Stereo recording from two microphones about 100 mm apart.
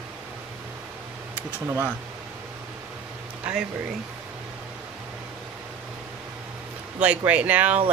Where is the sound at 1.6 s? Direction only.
15° right (ahead or behind).